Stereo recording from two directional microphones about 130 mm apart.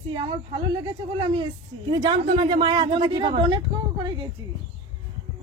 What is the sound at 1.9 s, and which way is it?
Speech, 35° right (ahead or behind).